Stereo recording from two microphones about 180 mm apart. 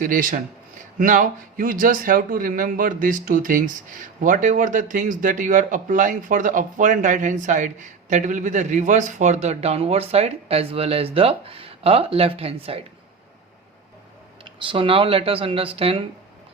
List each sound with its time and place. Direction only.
0.0 s speech: 50° right (ahead or behind); by 12.8 s 30° right (ahead or behind)
14.6 s speech: 30° right (ahead or behind)